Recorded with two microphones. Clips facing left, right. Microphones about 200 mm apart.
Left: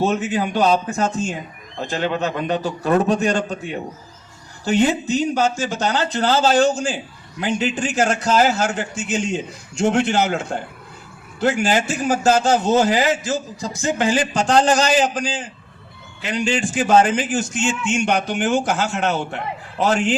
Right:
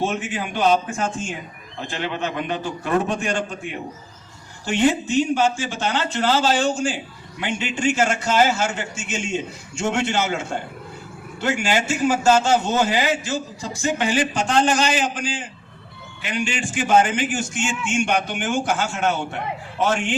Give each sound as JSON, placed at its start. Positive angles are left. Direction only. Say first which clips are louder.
{"t": 0.0, "sound": "a man's voice", "louder": "left 5 dB", "side_deg": 40}